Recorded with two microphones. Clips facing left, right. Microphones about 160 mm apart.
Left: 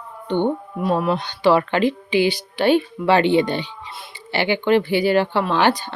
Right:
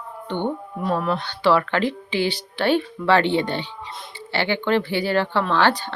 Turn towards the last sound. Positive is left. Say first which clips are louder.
# left 1 dB
turn(degrees=15)  # may be behind; listen again after turning